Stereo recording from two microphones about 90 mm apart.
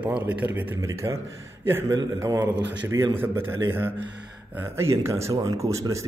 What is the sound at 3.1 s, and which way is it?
Speech, 25° right (ahead or behind).